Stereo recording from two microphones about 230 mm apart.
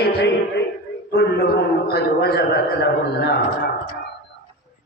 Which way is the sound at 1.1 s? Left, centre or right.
Left.